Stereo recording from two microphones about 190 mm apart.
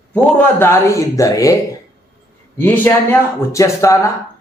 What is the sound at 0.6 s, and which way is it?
Speech, 15° left (ahead or behind).